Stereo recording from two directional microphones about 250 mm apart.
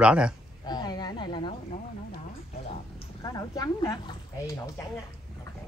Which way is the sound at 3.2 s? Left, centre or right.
Centre.